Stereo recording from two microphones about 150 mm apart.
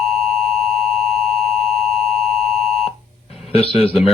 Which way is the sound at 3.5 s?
40° left (ahead or behind).